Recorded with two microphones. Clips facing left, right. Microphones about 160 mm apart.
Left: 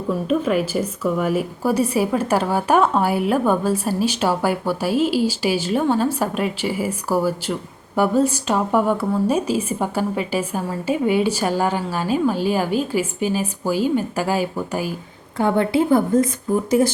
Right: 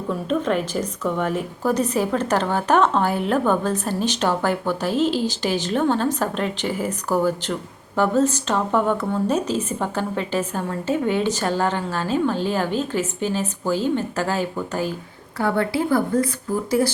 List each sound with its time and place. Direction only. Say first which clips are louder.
0.3 s a woman's voice: left 2 dB; 5° left (ahead or behind)